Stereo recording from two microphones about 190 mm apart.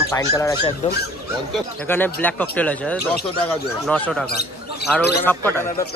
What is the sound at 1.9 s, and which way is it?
Speech, 10° left (ahead or behind).